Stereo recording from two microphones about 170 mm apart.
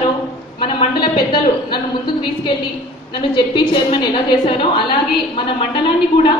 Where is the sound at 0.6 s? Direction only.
30° left (ahead or behind).